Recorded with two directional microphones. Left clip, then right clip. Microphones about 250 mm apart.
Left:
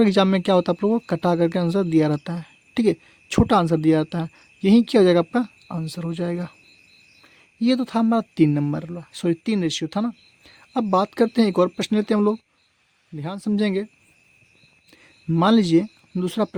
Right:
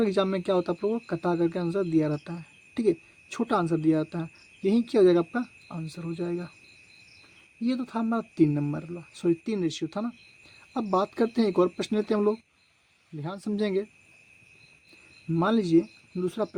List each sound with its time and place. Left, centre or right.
0.0 s speech: left
7.6 s speech: left
15.3 s speech: left